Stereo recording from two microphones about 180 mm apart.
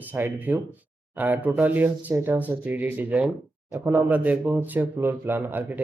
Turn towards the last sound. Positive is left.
turn(degrees=-10)  # may be behind; listen again after turning